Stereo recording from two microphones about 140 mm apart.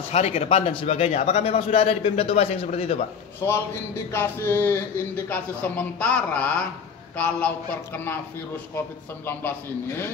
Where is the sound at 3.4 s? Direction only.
15° left (ahead or behind).